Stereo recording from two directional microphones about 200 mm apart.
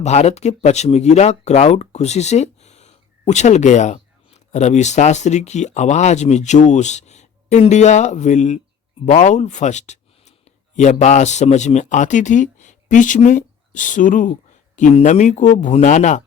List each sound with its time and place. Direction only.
0.0 s speech: 35° left (ahead or behind)